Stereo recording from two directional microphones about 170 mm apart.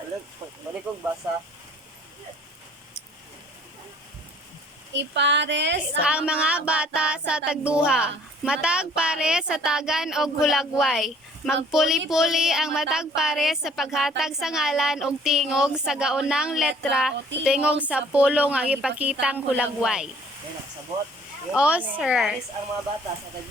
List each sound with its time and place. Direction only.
4.9 s speech: 90° right
6.0 s music: 5° right (ahead or behind)
17.4 s a woman's voice: 5° right (ahead or behind)
19.2 s music: 5° right (ahead or behind)
21.5 s a woman's voice: 5° right (ahead or behind)
21.9 s music: 5° right (ahead or behind)